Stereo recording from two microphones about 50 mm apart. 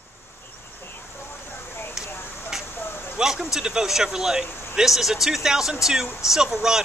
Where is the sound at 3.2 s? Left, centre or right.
Centre.